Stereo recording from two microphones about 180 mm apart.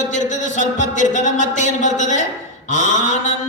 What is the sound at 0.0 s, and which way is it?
Speech, 45° left (ahead or behind).